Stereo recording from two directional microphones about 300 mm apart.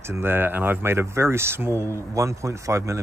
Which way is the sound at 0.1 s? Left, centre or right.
Centre.